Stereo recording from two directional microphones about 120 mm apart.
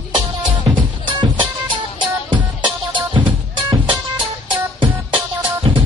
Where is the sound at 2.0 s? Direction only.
40° right (ahead or behind).